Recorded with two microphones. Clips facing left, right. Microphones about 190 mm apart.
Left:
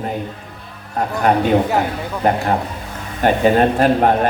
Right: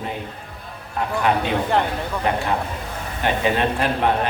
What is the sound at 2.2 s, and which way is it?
A man's voice, 45° left (ahead or behind).